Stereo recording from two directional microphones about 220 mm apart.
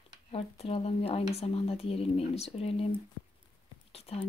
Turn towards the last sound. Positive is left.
turn(degrees=25)  # may be behind; listen again after turning